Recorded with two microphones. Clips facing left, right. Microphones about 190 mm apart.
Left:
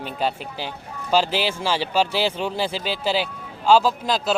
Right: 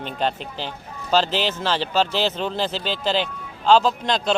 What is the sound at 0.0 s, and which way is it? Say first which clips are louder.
A man's voice: even; 10° left (ahead or behind).